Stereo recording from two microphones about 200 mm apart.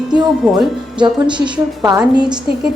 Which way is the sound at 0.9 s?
25° right (ahead or behind).